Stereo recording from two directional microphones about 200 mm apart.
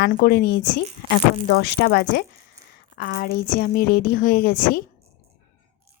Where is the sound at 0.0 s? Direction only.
50° left (ahead or behind).